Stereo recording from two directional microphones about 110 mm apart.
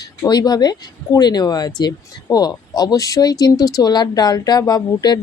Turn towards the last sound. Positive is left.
turn(degrees=35)  # may be behind; listen again after turning